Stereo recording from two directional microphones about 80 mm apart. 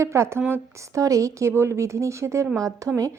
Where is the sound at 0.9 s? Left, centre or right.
Right.